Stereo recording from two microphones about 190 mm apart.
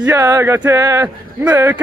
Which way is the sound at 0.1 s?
15° right (ahead or behind).